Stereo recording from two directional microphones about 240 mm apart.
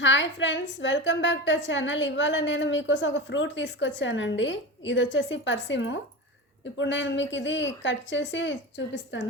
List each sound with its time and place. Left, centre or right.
0.0 s a woman's voice: left